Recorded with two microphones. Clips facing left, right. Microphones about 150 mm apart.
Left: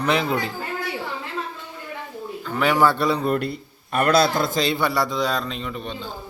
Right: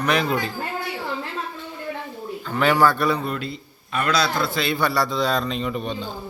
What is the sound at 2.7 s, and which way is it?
Speech, 25° left (ahead or behind).